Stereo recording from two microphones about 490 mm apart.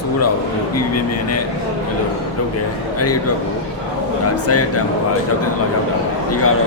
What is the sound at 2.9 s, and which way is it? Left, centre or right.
Speech, left.